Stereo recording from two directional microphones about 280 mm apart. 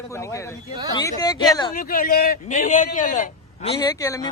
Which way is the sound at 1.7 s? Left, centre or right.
Left.